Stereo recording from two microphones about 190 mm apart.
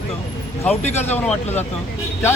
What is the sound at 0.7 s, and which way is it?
Speech, 35° left (ahead or behind).